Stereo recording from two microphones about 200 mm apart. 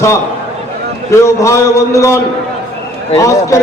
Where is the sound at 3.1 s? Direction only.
15° left (ahead or behind).